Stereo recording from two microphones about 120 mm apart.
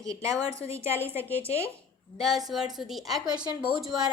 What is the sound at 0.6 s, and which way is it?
Speech, 65° left (ahead or behind).